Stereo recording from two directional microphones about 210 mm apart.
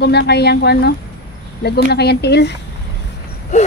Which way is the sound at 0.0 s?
50° left (ahead or behind).